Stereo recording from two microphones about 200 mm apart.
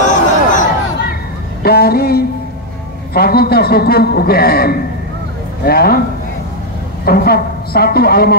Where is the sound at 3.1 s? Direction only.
50° left (ahead or behind).